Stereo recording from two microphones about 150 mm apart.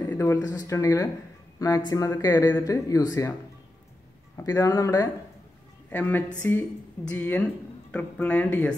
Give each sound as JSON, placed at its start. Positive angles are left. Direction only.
{"t": 0.0, "sound": "speech", "side_deg": 15}
{"t": 4.4, "sound": "speech", "side_deg": 20}
{"t": 5.9, "sound": "speech", "side_deg": 10}